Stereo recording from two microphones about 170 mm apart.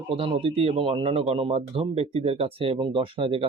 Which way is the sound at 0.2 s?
30° right (ahead or behind).